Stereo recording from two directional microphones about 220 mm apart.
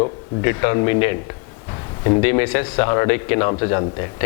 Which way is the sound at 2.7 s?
20° left (ahead or behind).